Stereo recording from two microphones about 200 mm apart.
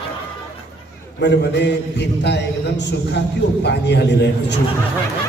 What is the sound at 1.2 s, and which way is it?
A man's voice, 60° left (ahead or behind).